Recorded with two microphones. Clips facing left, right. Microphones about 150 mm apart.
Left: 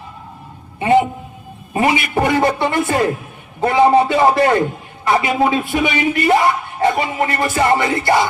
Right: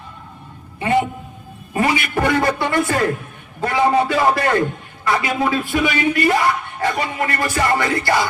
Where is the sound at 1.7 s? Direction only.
20° left (ahead or behind).